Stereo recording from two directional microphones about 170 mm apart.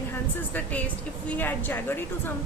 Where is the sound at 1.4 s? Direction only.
10° left (ahead or behind).